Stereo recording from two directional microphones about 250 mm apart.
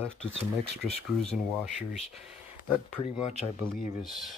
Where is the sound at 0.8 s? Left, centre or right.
Left.